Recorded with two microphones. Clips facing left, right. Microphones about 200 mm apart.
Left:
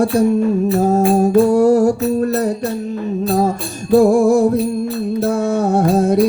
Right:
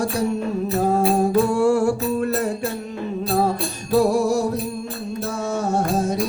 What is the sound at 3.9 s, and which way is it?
Music, 50° left (ahead or behind).